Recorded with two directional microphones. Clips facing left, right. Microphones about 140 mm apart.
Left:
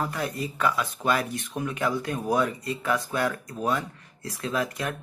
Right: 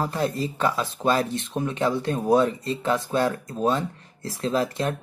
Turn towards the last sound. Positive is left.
turn(degrees=-30)  # may be behind; listen again after turning